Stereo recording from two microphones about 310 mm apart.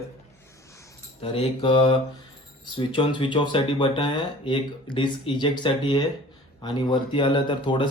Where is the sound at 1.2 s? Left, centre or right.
Centre.